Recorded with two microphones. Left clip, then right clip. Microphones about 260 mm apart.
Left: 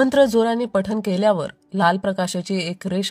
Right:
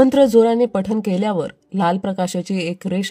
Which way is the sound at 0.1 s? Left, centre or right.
Left.